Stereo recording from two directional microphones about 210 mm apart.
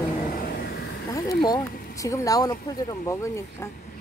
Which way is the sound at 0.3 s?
45° left (ahead or behind).